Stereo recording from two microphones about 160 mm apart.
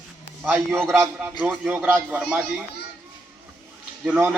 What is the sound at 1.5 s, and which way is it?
Speech, 10° right (ahead or behind).